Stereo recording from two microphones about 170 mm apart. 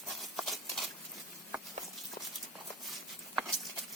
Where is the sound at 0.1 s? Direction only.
Centre (ahead or behind).